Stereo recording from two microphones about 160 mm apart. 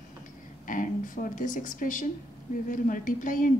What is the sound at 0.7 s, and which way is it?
A woman's voice, 55° left (ahead or behind).